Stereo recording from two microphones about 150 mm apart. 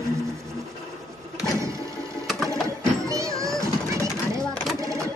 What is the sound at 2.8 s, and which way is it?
Music, 20° right (ahead or behind).